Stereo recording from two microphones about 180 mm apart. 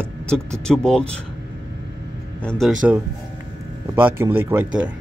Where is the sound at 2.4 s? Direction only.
5° left (ahead or behind).